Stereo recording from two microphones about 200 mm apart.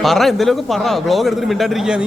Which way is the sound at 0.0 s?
Centre (ahead or behind).